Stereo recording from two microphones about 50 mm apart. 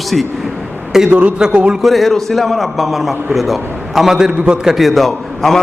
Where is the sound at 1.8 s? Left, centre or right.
Centre.